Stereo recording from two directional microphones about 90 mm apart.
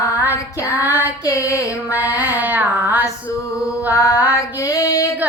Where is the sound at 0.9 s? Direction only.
20° right (ahead or behind).